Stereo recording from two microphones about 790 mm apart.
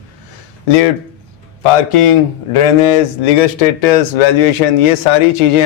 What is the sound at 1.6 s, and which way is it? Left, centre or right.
A man's voice, left.